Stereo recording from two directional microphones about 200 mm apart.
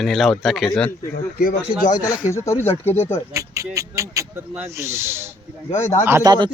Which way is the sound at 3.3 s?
15° right (ahead or behind).